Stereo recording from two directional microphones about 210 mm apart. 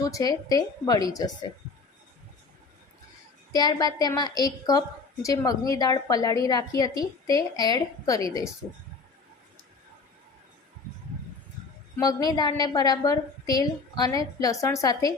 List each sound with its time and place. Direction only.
0.0 s a woman's voice: 15° left (ahead or behind)
3.5 s a woman's voice: 20° left (ahead or behind)
11.9 s a woman's voice: 20° left (ahead or behind)